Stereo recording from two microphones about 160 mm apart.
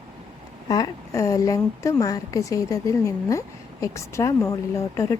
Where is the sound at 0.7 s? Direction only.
20° left (ahead or behind).